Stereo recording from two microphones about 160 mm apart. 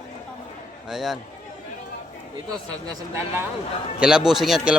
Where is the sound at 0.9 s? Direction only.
Centre (ahead or behind).